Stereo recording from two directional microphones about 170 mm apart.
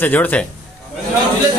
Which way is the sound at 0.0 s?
10° left (ahead or behind).